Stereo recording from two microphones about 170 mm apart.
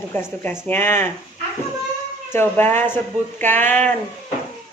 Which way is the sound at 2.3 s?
10° left (ahead or behind).